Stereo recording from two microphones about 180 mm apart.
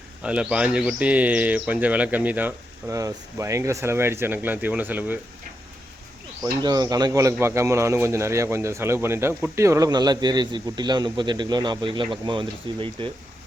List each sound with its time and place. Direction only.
0.2 s speech: 5° right (ahead or behind)
6.4 s a man's voice: 20° right (ahead or behind)